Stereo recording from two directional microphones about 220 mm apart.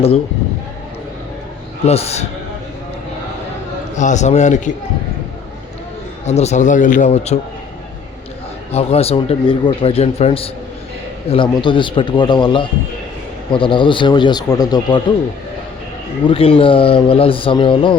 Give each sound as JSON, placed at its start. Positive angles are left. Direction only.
{"t": 1.9, "sound": "a man's voice", "side_deg": 30}
{"t": 3.9, "sound": "a man's voice", "side_deg": 35}
{"t": 6.2, "sound": "a man's voice", "side_deg": 30}
{"t": 8.7, "sound": "a man's voice", "side_deg": 25}
{"t": 16.2, "sound": "a man's voice", "side_deg": 25}